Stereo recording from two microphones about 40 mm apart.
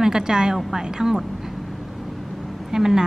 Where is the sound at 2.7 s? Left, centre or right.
Centre.